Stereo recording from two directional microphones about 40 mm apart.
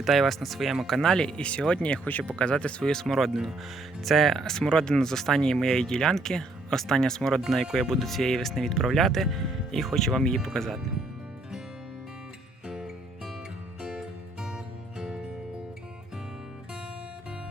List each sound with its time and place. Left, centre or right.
0.0 s speech: centre
1.0 s speech: centre
2.9 s speech: centre
7.6 s speech: centre
14.4 s music: centre